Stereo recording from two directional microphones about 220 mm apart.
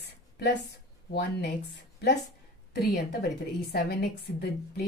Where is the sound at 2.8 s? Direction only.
45° left (ahead or behind).